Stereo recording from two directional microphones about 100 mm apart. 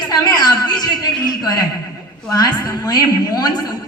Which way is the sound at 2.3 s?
40° left (ahead or behind).